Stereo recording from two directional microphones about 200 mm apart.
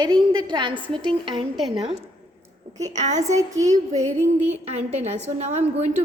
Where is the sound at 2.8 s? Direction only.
35° right (ahead or behind).